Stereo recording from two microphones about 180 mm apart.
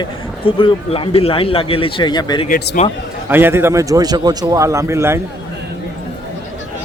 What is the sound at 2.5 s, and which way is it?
Speech, 65° left (ahead or behind).